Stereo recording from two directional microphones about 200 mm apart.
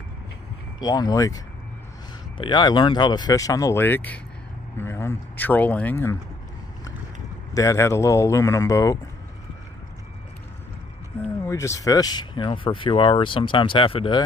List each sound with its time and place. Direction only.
0.7 s speech: 20° left (ahead or behind)
7.5 s speech: 15° left (ahead or behind)
11.4 s speech: 15° left (ahead or behind)